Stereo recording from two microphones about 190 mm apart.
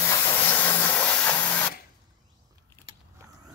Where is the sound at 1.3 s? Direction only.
10° left (ahead or behind).